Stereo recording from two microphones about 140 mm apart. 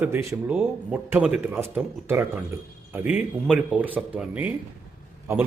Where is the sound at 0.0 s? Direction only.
20° right (ahead or behind).